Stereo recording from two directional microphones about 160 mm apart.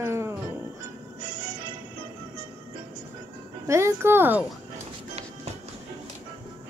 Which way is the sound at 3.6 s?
15° right (ahead or behind).